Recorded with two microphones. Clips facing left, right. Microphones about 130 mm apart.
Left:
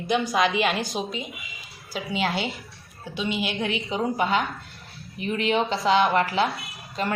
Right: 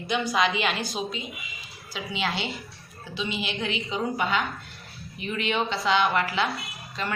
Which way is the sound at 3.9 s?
35° left (ahead or behind).